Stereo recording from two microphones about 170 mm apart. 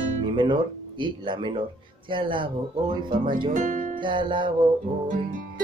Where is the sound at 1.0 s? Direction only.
30° right (ahead or behind).